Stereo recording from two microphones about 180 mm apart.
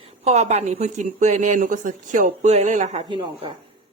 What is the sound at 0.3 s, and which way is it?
A woman's voice, 35° right (ahead or behind).